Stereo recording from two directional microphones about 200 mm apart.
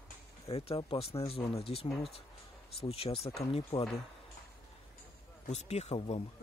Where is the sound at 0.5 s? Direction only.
30° left (ahead or behind).